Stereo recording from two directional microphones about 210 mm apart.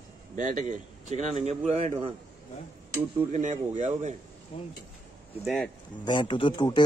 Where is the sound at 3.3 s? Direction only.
35° right (ahead or behind).